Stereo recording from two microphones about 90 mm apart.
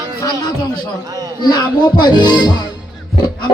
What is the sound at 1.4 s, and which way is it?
A man's voice, 50° left (ahead or behind).